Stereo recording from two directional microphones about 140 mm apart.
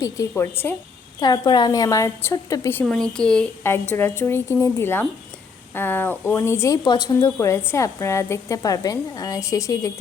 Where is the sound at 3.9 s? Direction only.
15° left (ahead or behind).